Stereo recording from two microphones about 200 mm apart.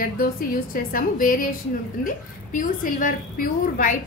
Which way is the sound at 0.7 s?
45° left (ahead or behind).